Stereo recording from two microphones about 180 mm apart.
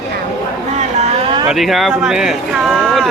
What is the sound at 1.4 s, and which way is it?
Speech, centre (ahead or behind).